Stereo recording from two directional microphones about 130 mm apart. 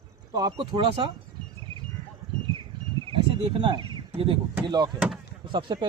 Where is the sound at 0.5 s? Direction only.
40° right (ahead or behind).